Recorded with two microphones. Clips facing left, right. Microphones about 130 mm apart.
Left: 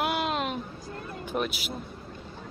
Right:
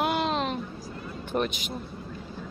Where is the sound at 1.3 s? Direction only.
5° left (ahead or behind).